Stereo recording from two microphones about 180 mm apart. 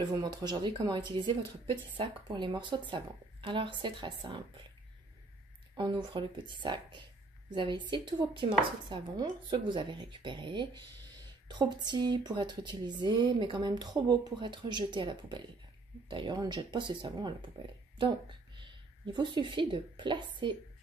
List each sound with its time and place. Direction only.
0.0 s speech: 20° right (ahead or behind)
5.8 s speech: 25° right (ahead or behind)
19.1 s speech: 25° right (ahead or behind)